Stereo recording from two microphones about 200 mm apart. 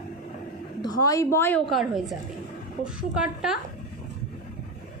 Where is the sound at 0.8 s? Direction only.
20° left (ahead or behind).